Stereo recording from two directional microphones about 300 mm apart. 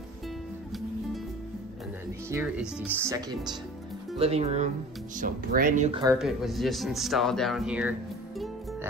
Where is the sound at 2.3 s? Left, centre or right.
Centre.